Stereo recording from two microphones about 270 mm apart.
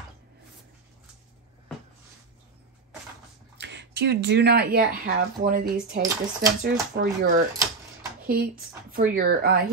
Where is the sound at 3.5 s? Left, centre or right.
Right.